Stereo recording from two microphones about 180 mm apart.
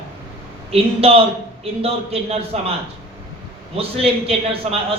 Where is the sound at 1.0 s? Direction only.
35° right (ahead or behind).